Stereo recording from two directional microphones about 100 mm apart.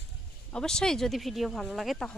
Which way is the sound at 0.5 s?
5° left (ahead or behind).